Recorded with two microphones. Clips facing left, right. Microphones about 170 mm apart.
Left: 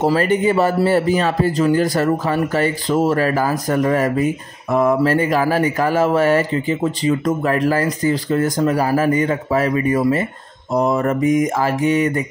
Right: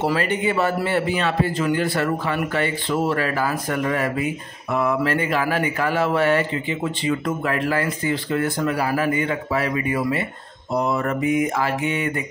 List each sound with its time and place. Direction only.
0.0 s speech: 40° left (ahead or behind)
10.7 s mantra: 45° left (ahead or behind)